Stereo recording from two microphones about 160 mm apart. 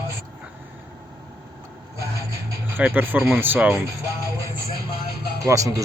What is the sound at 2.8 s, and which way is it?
Speech, 10° right (ahead or behind).